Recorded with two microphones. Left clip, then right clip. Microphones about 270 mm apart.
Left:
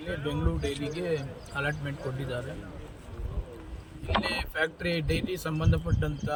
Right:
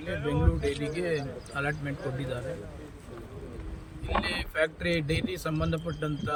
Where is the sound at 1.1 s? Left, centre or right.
Centre.